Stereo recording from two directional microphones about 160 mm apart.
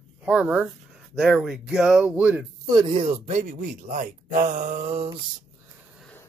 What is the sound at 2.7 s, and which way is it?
Speech, 30° right (ahead or behind).